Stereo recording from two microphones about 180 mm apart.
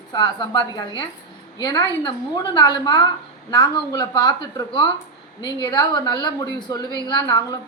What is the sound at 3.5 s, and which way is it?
A woman's voice, 20° left (ahead or behind).